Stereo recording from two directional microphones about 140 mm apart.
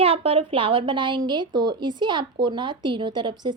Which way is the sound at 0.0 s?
45° right (ahead or behind).